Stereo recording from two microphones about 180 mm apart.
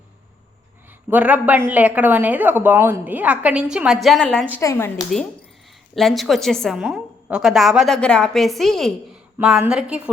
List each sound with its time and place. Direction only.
1.1 s speech: 10° right (ahead or behind)
4.6 s speech: 15° left (ahead or behind)
5.9 s a woman's voice: centre (ahead or behind)